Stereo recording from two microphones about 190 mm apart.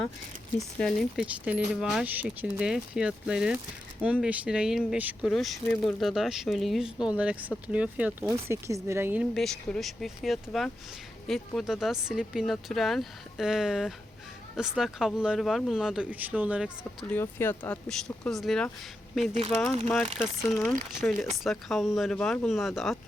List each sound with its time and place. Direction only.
0.8 s speech: centre (ahead or behind)
9.3 s speech: centre (ahead or behind)
17.1 s speech: 10° left (ahead or behind)